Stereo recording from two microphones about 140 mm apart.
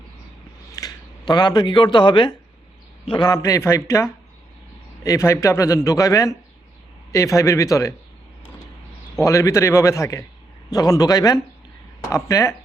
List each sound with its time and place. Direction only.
0.7 s a man's voice: 25° left (ahead or behind)
9.2 s a man's voice: 20° left (ahead or behind)